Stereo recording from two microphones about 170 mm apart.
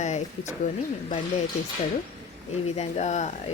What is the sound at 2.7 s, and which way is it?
Speech, 40° left (ahead or behind).